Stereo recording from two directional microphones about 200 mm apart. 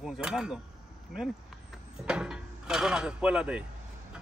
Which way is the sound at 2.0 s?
5° right (ahead or behind).